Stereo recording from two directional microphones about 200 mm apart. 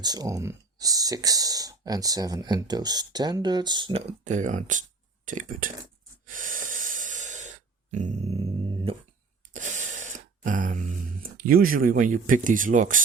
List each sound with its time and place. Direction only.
0.0 s speech: 20° right (ahead or behind)
4.2 s speech: 35° right (ahead or behind)
6.2 s breathing: 40° right (ahead or behind)
8.7 s a sound: 30° right (ahead or behind)